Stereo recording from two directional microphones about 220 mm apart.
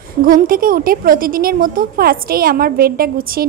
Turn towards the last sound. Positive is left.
turn(degrees=-40)  # may be behind; listen again after turning